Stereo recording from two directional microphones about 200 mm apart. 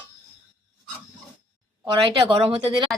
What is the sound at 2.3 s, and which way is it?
Speech, 25° right (ahead or behind).